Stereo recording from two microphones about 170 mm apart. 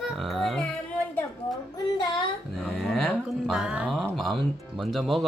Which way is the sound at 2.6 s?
Centre (ahead or behind).